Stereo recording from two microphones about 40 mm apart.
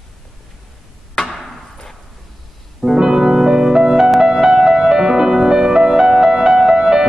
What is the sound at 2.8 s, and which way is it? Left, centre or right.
Music, centre.